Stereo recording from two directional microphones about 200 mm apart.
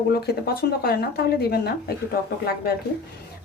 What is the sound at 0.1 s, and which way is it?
Speech, 50° left (ahead or behind).